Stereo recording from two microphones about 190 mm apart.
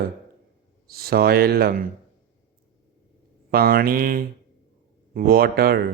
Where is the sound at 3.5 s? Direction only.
50° right (ahead or behind).